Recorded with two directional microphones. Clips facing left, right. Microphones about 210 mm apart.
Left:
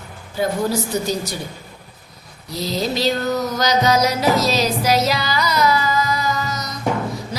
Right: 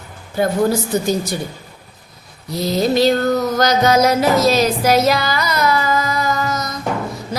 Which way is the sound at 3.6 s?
55° right (ahead or behind).